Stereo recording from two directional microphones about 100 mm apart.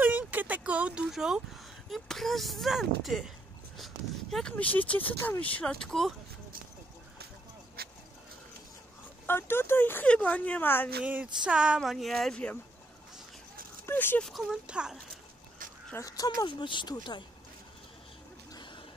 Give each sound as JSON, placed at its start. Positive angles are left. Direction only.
{"t": 0.0, "sound": "a sound", "side_deg": -15}
{"t": 1.9, "sound": "speech", "side_deg": 0}
{"t": 5.6, "sound": "speech", "side_deg": 10}
{"t": 9.2, "sound": "speech", "side_deg": 20}
{"t": 11.4, "sound": "speech", "side_deg": -10}
{"t": 13.8, "sound": "speech", "side_deg": 20}
{"t": 14.2, "sound": "a child's voice", "side_deg": 0}
{"t": 15.9, "sound": "speech", "side_deg": 35}
{"t": 16.4, "sound": "speech", "side_deg": 50}
{"t": 18.5, "sound": "a sound", "side_deg": 50}